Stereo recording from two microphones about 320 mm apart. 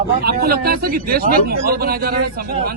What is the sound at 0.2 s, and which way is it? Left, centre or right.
Speech, right.